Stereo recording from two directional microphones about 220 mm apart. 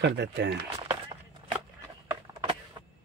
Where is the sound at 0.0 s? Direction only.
50° right (ahead or behind).